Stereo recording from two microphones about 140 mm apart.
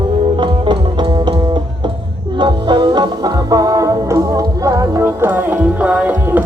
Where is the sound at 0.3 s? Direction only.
35° right (ahead or behind).